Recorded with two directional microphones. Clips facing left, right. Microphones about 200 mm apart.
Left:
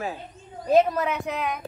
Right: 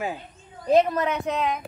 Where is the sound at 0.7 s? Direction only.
5° left (ahead or behind).